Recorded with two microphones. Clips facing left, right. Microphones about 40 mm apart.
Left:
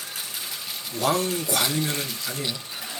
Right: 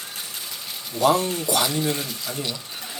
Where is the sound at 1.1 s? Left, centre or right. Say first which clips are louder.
Right 2 dB; right.